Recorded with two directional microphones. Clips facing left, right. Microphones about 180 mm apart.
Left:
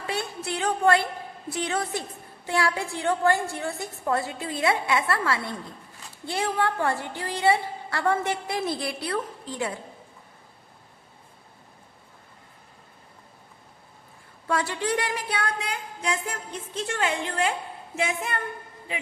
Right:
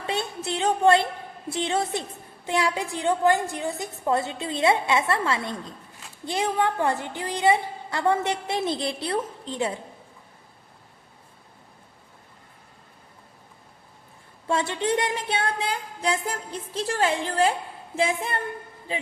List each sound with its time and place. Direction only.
0.1 s music: 20° right (ahead or behind)
1.5 s a woman's voice: 25° right (ahead or behind)
14.4 s a woman's voice: 25° right (ahead or behind)